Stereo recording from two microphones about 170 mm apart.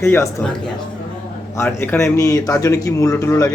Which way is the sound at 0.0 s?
15° left (ahead or behind).